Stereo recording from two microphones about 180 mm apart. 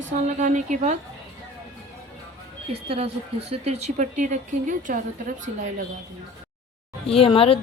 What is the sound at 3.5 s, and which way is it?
Speech, 35° right (ahead or behind).